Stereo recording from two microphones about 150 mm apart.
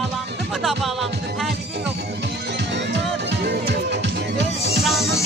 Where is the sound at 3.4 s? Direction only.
90° right.